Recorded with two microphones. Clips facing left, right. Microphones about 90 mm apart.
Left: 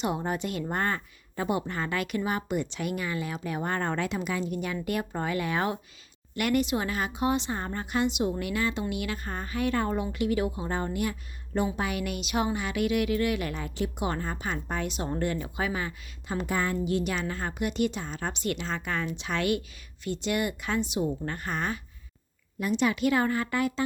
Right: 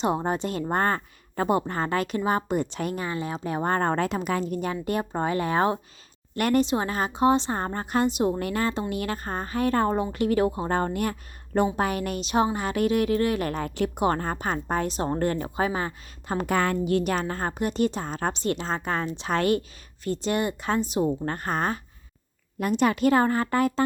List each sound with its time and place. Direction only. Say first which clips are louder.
0.0 s speech: right 4 dB; 35° right (ahead or behind); by 16.6 s 50° right (ahead or behind)
16.6 s a woman's voice: right 4 dB; 60° right (ahead or behind); by 23.8 s 40° right (ahead or behind)